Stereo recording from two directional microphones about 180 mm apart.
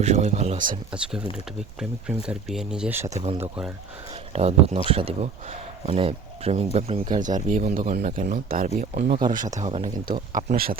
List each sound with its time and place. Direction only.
0.0 s speech: 40° right (ahead or behind)
1.8 s speech: 5° right (ahead or behind)
3.1 s speech: 35° right (ahead or behind)
7.2 s speech: 45° right (ahead or behind)
9.6 s speech: 35° right (ahead or behind)
10.3 s speech: 50° right (ahead or behind)